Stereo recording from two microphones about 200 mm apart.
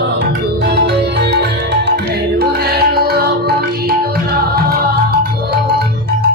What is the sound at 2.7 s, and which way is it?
Music, 50° right (ahead or behind).